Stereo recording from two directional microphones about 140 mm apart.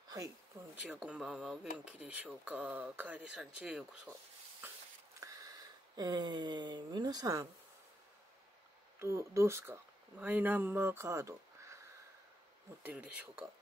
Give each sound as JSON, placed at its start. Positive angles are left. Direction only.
{"t": 0.1, "sound": "speech", "side_deg": -20}
{"t": 0.8, "sound": "speech", "side_deg": -10}
{"t": 4.6, "sound": "a sound", "side_deg": -15}
{"t": 5.2, "sound": "speech", "side_deg": -25}
{"t": 9.0, "sound": "speech", "side_deg": -20}
{"t": 12.8, "sound": "speech", "side_deg": -10}